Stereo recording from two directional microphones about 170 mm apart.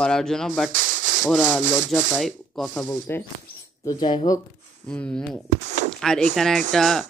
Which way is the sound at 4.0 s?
30° left (ahead or behind).